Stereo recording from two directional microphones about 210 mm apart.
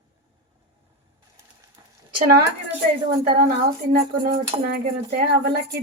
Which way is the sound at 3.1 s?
45° right (ahead or behind).